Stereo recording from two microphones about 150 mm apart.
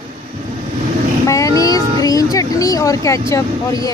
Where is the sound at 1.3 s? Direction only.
20° left (ahead or behind).